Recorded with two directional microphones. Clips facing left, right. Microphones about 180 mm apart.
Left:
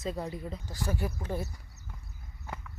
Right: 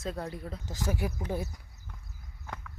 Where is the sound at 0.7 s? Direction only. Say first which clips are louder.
Right 2 dB; 15° right (ahead or behind).